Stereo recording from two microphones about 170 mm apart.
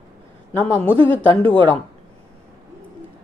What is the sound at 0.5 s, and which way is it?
Speech, 10° left (ahead or behind).